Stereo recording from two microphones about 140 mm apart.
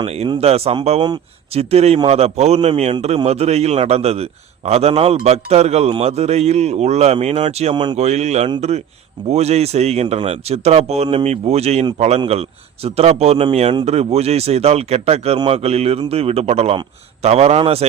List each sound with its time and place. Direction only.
0.0 s a man's voice: 50° right (ahead or behind)